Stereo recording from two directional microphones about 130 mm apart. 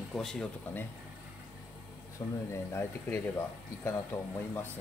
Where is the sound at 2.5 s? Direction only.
20° left (ahead or behind).